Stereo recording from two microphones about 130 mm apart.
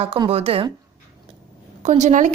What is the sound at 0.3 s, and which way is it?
Speech, 50° right (ahead or behind).